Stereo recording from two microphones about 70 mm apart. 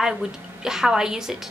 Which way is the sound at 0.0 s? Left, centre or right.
Centre.